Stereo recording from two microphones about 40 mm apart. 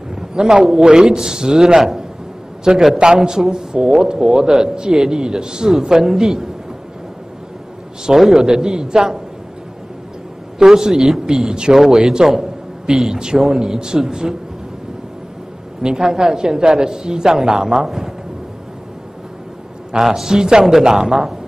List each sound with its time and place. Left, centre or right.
0.1 s a man's voice: centre
8.2 s a man's voice: centre
10.6 s a man's voice: centre
11.7 s a man's voice: centre
15.8 s a man's voice: centre
20.0 s a man's voice: centre